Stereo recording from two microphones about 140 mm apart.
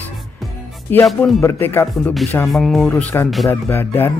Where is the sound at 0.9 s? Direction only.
15° left (ahead or behind).